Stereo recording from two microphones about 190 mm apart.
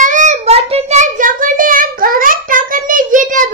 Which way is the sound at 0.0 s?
40° right (ahead or behind).